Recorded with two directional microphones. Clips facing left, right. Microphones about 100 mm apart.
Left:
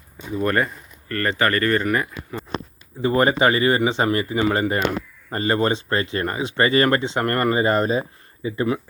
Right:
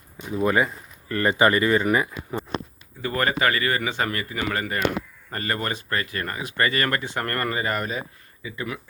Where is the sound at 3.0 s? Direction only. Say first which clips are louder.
Left 6 dB; 25° left (ahead or behind).